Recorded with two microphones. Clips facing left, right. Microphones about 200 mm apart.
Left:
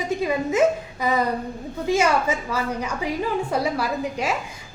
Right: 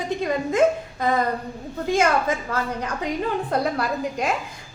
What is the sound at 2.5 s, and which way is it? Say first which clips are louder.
A woman's voice: left 1 dB; 10° left (ahead or behind).